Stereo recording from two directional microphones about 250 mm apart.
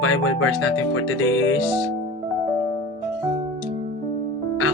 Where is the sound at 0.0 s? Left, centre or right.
Left.